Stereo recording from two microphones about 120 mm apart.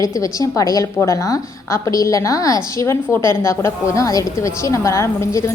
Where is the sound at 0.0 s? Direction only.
30° left (ahead or behind).